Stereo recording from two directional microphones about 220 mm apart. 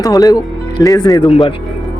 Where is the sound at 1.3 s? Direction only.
30° left (ahead or behind).